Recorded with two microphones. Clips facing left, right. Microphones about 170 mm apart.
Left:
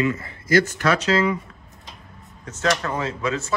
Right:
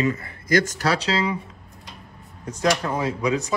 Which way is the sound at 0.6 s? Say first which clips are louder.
Left 2 dB; 35° right (ahead or behind).